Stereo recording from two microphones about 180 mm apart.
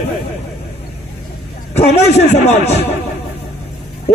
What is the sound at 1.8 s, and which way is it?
A man's voice, 40° left (ahead or behind).